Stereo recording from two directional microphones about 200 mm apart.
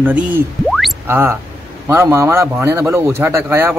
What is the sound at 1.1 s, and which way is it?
A man's voice, 10° right (ahead or behind).